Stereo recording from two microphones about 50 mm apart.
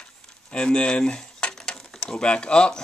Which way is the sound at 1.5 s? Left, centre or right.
Centre.